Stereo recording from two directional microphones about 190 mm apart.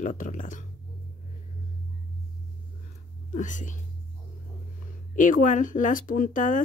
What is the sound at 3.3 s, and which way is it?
Speech, 40° left (ahead or behind).